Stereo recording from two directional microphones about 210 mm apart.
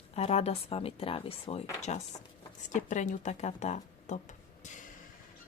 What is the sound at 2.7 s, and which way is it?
A woman's voice, 35° left (ahead or behind).